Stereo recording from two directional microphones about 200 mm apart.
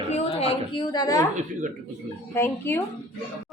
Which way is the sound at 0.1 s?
30° left (ahead or behind).